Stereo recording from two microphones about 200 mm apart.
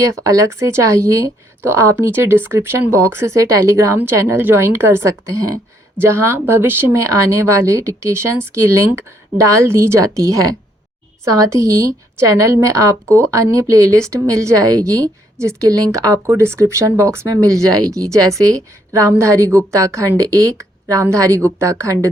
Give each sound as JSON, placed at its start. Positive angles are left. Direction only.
{"t": 0.0, "sound": "a woman's voice", "side_deg": -15}
{"t": 12.3, "sound": "a woman's voice", "side_deg": -15}